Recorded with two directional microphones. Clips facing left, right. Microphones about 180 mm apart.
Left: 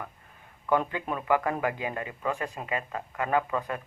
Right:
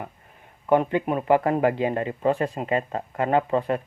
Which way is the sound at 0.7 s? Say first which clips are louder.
Right 7 dB; 25° right (ahead or behind).